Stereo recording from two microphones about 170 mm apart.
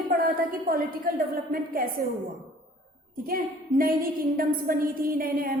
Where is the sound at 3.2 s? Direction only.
60° right (ahead or behind).